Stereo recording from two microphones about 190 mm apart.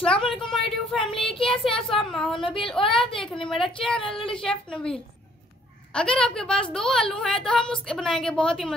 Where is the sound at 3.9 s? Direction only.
25° left (ahead or behind).